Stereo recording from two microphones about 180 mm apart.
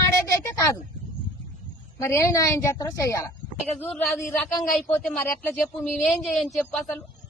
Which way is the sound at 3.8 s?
Centre (ahead or behind).